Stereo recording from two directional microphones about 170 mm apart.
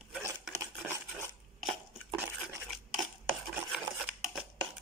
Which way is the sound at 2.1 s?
15° right (ahead or behind).